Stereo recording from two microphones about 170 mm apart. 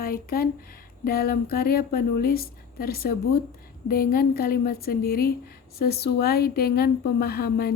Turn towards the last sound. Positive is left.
turn(degrees=65)  # may be behind; listen again after turning